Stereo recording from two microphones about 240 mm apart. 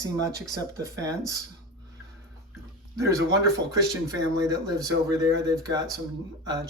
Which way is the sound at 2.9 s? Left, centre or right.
Centre.